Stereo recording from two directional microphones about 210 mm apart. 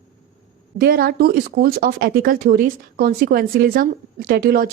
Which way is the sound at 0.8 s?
45° right (ahead or behind).